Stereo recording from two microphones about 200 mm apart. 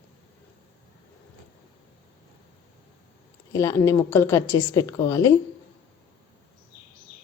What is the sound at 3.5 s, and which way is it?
A woman's voice, 15° left (ahead or behind).